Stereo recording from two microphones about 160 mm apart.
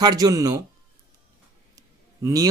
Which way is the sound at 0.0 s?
25° right (ahead or behind).